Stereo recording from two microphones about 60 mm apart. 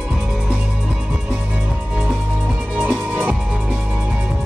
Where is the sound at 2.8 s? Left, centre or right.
Right.